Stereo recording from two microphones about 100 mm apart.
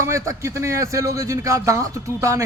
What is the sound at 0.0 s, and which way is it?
A man's voice, 30° right (ahead or behind).